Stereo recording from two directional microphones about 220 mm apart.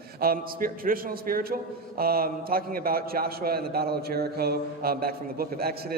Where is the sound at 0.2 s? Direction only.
40° right (ahead or behind).